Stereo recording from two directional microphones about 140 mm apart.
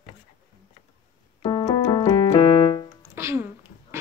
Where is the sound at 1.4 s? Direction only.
30° left (ahead or behind).